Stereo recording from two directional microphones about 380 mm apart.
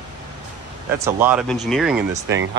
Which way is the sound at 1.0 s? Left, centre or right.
Centre.